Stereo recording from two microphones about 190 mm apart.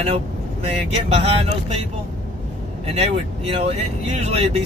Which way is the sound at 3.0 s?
35° right (ahead or behind).